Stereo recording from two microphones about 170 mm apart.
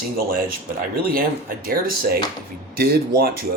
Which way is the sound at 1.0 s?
60° right (ahead or behind).